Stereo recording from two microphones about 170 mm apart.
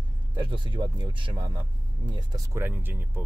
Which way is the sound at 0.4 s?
30° right (ahead or behind).